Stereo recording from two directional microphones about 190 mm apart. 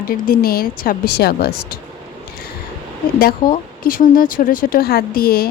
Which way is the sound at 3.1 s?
50° left (ahead or behind).